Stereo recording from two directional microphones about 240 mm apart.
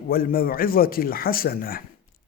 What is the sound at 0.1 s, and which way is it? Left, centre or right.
A man's voice, left.